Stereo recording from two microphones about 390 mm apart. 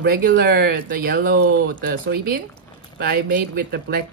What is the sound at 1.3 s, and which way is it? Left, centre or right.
Speech, right.